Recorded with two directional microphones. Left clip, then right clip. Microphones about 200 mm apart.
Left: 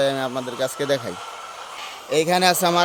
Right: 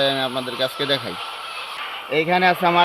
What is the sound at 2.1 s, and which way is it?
Speech, 35° left (ahead or behind).